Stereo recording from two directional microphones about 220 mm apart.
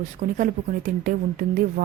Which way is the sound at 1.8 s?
40° right (ahead or behind).